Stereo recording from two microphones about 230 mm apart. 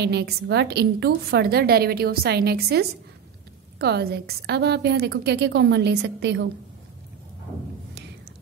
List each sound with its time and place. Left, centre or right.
0.0 s a woman's voice: right